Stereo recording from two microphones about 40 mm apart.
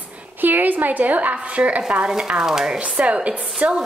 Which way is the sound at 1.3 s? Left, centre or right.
Right.